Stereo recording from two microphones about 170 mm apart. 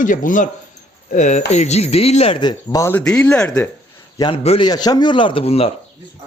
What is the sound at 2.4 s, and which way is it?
Speech, 20° left (ahead or behind).